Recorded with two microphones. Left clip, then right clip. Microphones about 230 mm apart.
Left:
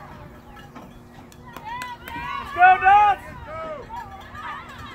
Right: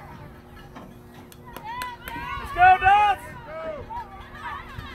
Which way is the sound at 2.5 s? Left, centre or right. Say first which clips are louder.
Left 2 dB; right.